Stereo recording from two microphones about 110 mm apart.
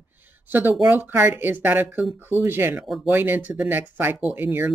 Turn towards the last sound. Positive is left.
turn(degrees=-15)  # may be behind; listen again after turning